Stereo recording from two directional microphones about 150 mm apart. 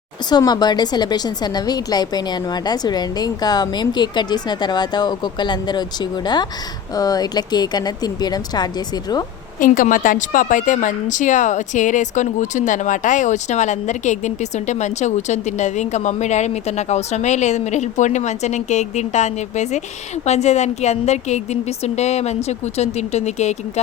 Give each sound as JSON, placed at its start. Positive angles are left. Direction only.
{"t": 0.3, "sound": "a woman's voice", "side_deg": 25}
{"t": 9.6, "sound": "a woman's voice", "side_deg": 60}